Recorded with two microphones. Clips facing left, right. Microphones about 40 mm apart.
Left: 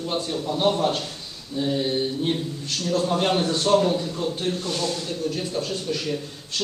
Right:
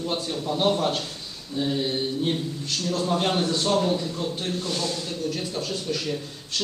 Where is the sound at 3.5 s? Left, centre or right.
Centre.